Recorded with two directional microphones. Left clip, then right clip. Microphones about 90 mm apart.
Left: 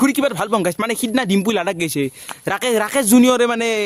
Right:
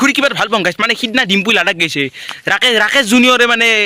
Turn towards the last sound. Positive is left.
turn(degrees=30)  # may be behind; listen again after turning